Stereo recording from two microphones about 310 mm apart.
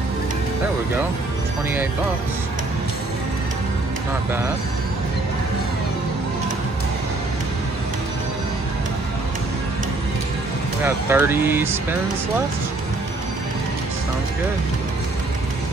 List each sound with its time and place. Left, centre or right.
10.8 s speech: centre